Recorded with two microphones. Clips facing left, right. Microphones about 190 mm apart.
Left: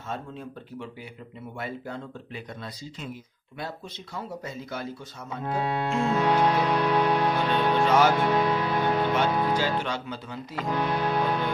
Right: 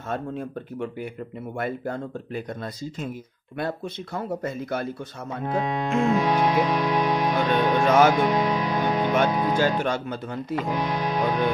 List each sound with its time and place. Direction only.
0.1 s speech: 55° right (ahead or behind)
5.4 s music: 15° right (ahead or behind)
7.8 s speech: 50° right (ahead or behind)
8.1 s speech: 15° right (ahead or behind)
9.3 s music: 15° right (ahead or behind)
9.6 s speech: 50° right (ahead or behind)
10.7 s music: 15° right (ahead or behind)